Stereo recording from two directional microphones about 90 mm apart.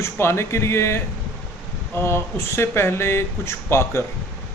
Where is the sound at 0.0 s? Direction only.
30° left (ahead or behind).